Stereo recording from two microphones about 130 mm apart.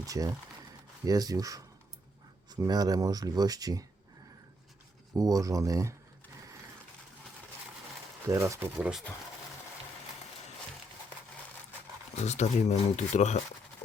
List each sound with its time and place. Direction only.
0.0 s speech: 25° right (ahead or behind)
5.1 s speech: 25° right (ahead or behind)
8.3 s speech: 20° right (ahead or behind)
8.8 s speech: 5° right (ahead or behind)
12.1 s speech: 60° left (ahead or behind)